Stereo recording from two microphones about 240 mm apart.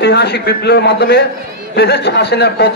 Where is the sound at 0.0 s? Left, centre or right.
Left.